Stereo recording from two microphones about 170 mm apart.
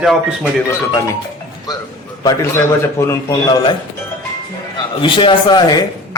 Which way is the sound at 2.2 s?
20° left (ahead or behind).